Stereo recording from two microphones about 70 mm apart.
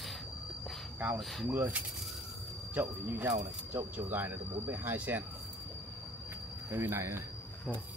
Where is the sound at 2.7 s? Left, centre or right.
Right.